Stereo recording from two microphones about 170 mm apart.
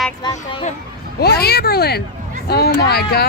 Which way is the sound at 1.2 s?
65° left (ahead or behind).